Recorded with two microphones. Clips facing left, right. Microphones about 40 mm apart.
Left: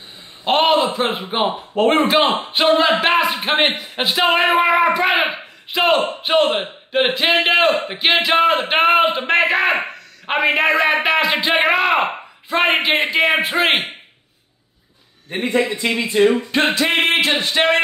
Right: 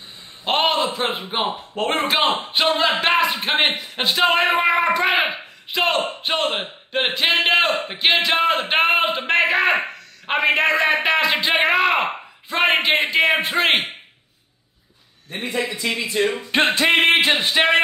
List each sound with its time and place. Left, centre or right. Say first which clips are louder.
0.5 s speech: left 4 dB; centre
15.2 s a man's voice: left 6 dB; left
16.1 s a sound: left 7 dB; centre
16.5 s music: left 1 dB; right
17.2 s a sound: even; right
17.5 s speech: left 1 dB; centre